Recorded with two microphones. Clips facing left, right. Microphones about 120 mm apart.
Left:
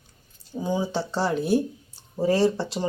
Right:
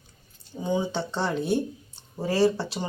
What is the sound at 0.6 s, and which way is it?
Speech, 5° left (ahead or behind).